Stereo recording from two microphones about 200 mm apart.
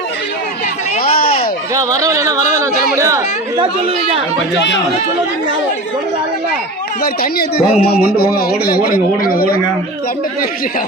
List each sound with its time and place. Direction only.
1.7 s speech: 15° right (ahead or behind)
7.0 s speech: 50° left (ahead or behind)